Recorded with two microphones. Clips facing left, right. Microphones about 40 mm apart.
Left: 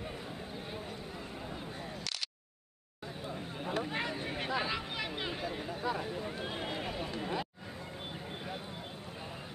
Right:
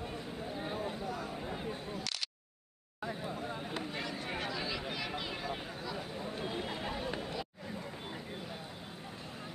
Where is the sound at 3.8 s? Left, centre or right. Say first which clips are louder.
Left 4 dB; left.